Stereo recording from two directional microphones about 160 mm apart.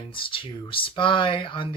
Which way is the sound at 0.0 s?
35° left (ahead or behind).